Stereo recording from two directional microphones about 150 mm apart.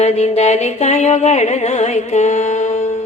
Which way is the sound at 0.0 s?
45° left (ahead or behind).